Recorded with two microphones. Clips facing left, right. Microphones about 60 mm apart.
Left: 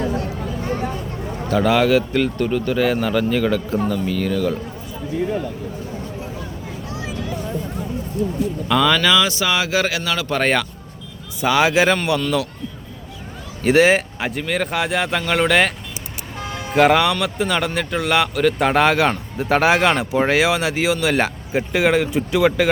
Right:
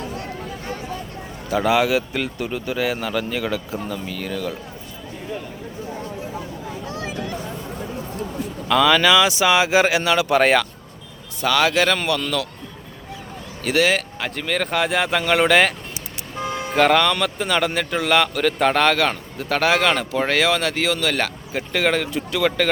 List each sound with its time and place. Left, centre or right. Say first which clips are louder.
1.5 s speech: left 2 dB; centre
8.6 s speech: right 1 dB; centre
9.0 s speech: right 1 dB; centre
11.4 s speech: left 2 dB; centre
13.7 s speech: left 5 dB; left
14.3 s speech: even; centre
16.4 s vehicle: right 4 dB; right
16.7 s speech: left 2 dB; centre